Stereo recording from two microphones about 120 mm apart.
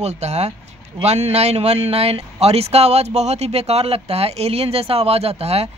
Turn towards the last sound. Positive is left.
turn(degrees=-60)  # may be behind; listen again after turning